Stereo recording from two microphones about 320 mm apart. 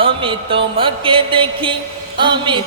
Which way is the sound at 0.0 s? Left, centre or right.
Centre.